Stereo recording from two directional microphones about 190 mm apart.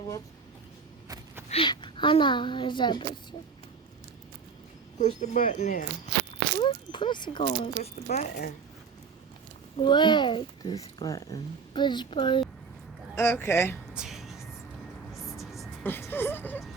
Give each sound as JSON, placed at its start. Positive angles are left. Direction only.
{"t": 1.0, "sound": "a sound", "side_deg": -15}
{"t": 1.5, "sound": "a woman's voice", "side_deg": 30}
{"t": 4.9, "sound": "speech", "side_deg": 40}
{"t": 6.6, "sound": "speech", "side_deg": 25}
{"t": 7.8, "sound": "speech", "side_deg": 45}
{"t": 9.7, "sound": "a woman's voice", "side_deg": 25}
{"t": 13.1, "sound": "speech", "side_deg": 10}
{"t": 13.9, "sound": "a sound", "side_deg": 0}
{"t": 15.1, "sound": "music", "side_deg": 0}
{"t": 15.8, "sound": "a sound", "side_deg": 10}